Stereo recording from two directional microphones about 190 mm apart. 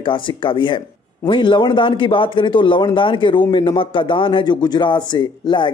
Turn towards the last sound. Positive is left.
turn(degrees=25)  # may be behind; listen again after turning